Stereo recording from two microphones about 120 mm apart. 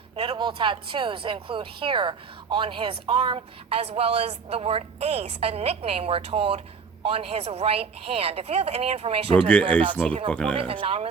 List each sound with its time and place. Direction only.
0.3 s a woman's voice: 40° right (ahead or behind)
9.4 s speech: 10° left (ahead or behind)
10.5 s speech: 50° right (ahead or behind)